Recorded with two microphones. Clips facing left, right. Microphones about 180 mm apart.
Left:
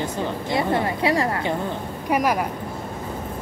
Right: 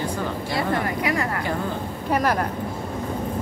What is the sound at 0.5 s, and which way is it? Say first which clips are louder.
A woman's voice: left 2 dB; 20° left (ahead or behind).